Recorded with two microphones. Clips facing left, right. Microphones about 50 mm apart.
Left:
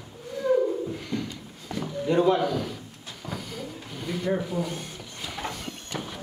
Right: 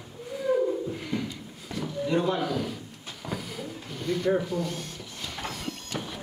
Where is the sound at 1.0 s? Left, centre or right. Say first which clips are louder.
Even; centre.